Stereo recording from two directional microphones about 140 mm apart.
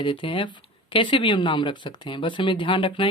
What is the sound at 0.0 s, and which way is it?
Speech, 35° left (ahead or behind).